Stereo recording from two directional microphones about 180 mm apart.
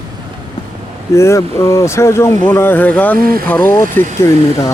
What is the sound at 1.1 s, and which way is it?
Speech, 15° left (ahead or behind).